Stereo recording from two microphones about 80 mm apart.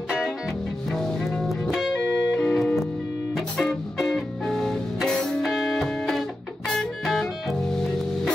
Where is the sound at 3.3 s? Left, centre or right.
Centre.